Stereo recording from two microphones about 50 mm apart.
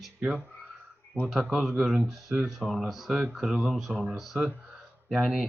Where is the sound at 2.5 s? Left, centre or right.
Centre.